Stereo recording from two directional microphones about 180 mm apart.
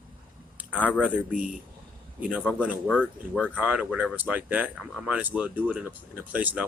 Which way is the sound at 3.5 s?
10° right (ahead or behind).